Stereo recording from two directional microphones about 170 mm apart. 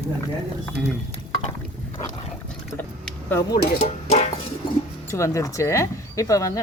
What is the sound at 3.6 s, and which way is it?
Speech, 60° left (ahead or behind).